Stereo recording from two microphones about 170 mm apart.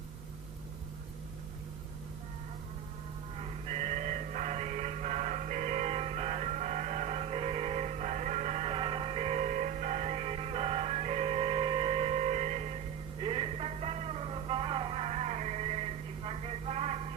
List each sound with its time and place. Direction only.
3.4 s music: 40° right (ahead or behind)